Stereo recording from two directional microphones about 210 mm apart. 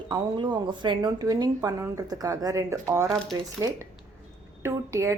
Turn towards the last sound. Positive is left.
turn(degrees=-15)  # may be behind; listen again after turning